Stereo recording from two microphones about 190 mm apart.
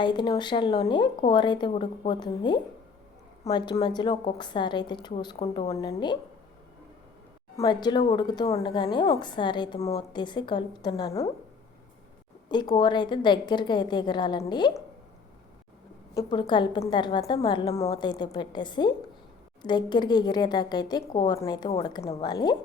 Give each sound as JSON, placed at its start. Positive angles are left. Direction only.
{"t": 0.0, "sound": "a woman's voice", "side_deg": 25}
{"t": 7.5, "sound": "a woman's voice", "side_deg": 20}
{"t": 12.7, "sound": "a woman's voice", "side_deg": 25}
{"t": 16.1, "sound": "a woman's voice", "side_deg": 25}